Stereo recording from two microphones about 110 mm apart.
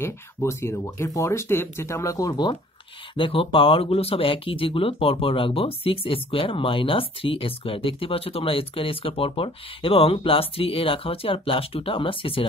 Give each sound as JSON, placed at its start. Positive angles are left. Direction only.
{"t": 0.0, "sound": "speech", "side_deg": 25}
{"t": 3.2, "sound": "speech", "side_deg": 55}